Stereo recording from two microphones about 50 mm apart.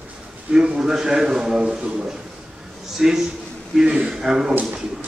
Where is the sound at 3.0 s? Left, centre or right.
Centre.